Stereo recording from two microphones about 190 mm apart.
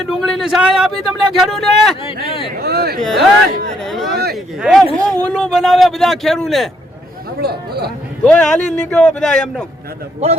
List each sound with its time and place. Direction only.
0.0 s speech: centre (ahead or behind)
2.2 s speech: 30° left (ahead or behind)
2.6 s speech: 55° right (ahead or behind)
3.0 s speech: centre (ahead or behind)
4.1 s speech: 55° right (ahead or behind)
4.4 s speech: centre (ahead or behind)
7.3 s speech: 55° right (ahead or behind)
8.2 s speech: 5° left (ahead or behind)